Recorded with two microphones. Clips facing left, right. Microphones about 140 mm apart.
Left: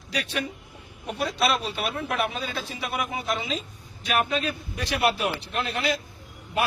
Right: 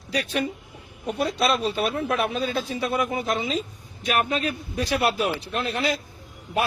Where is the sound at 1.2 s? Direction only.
45° right (ahead or behind).